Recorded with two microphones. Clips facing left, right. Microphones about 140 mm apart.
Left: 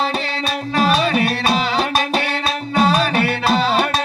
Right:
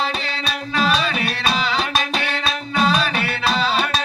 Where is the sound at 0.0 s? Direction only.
45° left (ahead or behind).